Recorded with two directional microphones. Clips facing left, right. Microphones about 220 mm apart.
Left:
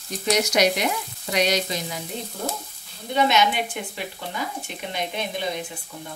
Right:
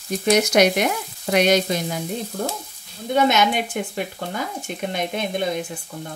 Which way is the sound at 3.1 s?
50° right (ahead or behind).